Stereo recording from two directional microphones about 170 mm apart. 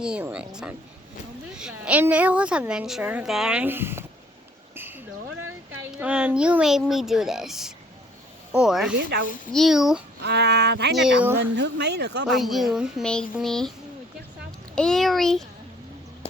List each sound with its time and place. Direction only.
0.0 s a woman's voice: 5° right (ahead or behind)
4.7 s a sound: 10° right (ahead or behind)
6.0 s speech: 10° right (ahead or behind)
9.0 s speech: 70° right (ahead or behind)
9.5 s speech: centre (ahead or behind)
10.2 s speech: 80° right
10.9 s speech: 5° right (ahead or behind)
11.5 s speech: 85° right
12.2 s speech: centre (ahead or behind)
14.8 s speech: 5° left (ahead or behind)